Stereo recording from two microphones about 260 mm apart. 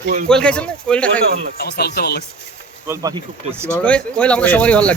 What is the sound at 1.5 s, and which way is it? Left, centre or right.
Speech, left.